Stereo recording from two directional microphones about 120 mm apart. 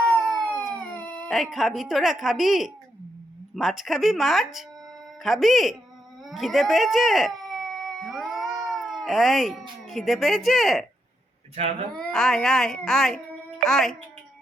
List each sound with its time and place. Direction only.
0.0 s siren: 5° left (ahead or behind)
0.8 s speech: 10° left (ahead or behind)
11.5 s speech: 60° right (ahead or behind)
11.9 s speech: 5° left (ahead or behind)